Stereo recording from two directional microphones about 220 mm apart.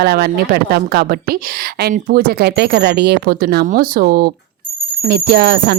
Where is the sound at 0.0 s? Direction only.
45° right (ahead or behind).